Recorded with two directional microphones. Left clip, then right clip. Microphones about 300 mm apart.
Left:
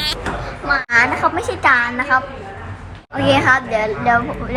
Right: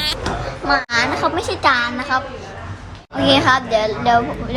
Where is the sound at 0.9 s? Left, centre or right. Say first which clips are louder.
Left 3 dB; centre.